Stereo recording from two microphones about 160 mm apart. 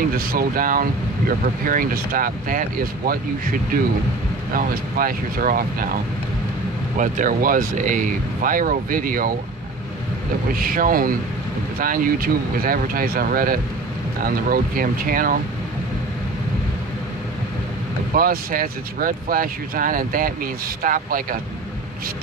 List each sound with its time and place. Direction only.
0.2 s speech: 65° right (ahead or behind)
7.0 s speech: 55° right (ahead or behind)
10.5 s speech: 65° right (ahead or behind)
18.1 s speech: 65° right (ahead or behind)